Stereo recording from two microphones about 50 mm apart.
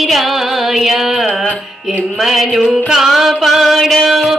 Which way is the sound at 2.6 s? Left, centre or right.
Centre.